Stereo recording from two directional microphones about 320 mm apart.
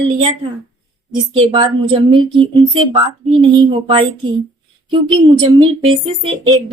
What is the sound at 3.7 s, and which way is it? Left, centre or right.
Speech, centre.